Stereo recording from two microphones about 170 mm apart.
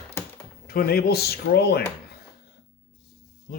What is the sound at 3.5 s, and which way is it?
Speech, 55° left (ahead or behind).